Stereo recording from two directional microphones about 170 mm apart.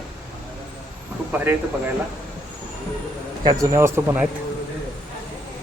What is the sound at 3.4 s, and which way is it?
Speech, 20° right (ahead or behind).